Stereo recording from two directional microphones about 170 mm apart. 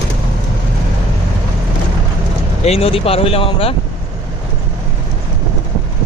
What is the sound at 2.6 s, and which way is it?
Speech, 35° left (ahead or behind).